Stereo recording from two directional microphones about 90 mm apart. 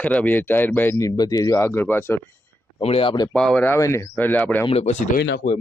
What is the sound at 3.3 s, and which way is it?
Speech, 10° left (ahead or behind).